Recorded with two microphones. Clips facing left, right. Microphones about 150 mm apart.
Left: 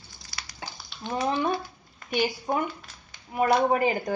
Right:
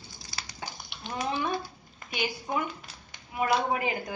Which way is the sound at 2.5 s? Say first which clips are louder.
Left 4 dB; 50° left (ahead or behind).